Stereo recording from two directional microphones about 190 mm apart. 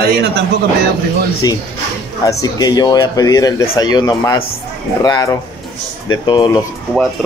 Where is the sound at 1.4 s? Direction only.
20° left (ahead or behind).